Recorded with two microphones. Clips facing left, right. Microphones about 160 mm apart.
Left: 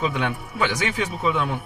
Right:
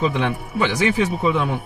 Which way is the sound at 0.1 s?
25° right (ahead or behind).